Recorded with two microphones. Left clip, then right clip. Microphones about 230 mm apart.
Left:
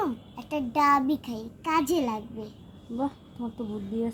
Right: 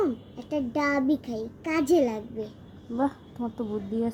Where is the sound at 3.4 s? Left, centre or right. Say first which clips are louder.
Right 3 dB; centre.